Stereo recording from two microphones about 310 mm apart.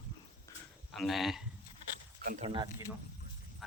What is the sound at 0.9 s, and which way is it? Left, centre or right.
Speech, centre.